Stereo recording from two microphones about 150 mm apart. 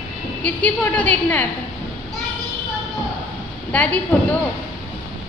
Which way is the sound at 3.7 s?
10° left (ahead or behind).